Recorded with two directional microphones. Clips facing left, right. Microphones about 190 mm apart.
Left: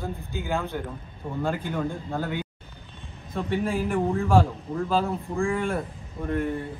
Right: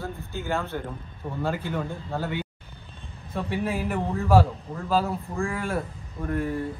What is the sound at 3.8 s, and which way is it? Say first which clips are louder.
A man's voice: left 1 dB; 5° right (ahead or behind).